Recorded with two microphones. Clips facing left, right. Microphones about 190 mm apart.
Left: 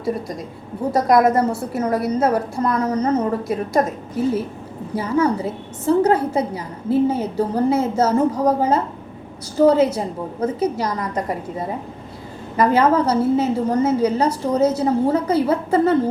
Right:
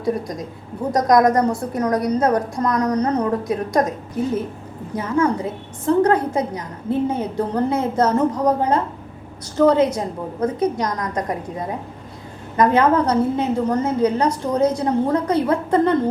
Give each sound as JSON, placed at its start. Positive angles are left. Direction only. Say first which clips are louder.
{"t": 0.0, "sound": "a woman's voice", "louder": "right 1 dB", "side_deg": 0}
{"t": 4.9, "sound": "a woman's voice", "louder": "left 1 dB", "side_deg": 10}